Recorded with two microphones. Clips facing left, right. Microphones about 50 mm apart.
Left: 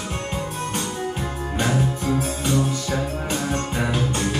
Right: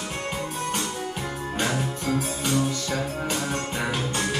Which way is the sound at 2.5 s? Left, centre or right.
Centre.